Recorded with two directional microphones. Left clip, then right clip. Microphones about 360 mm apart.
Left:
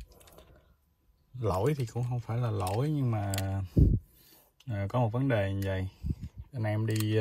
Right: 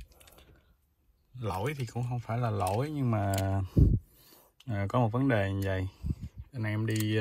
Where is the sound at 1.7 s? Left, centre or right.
Centre.